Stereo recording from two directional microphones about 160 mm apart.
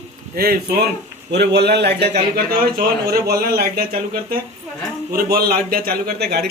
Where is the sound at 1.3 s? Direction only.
90° right.